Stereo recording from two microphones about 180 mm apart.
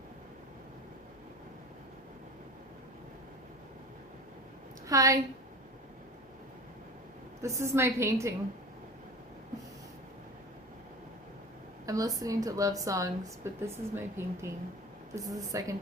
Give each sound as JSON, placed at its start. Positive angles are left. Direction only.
{"t": 4.9, "sound": "speech", "side_deg": -20}
{"t": 7.4, "sound": "a woman's voice", "side_deg": -15}
{"t": 11.9, "sound": "speech", "side_deg": -20}